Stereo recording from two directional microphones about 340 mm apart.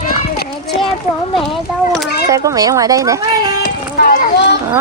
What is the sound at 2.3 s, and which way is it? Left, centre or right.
Speech, centre.